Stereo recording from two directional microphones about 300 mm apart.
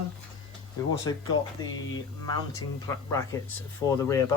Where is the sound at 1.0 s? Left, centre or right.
Centre.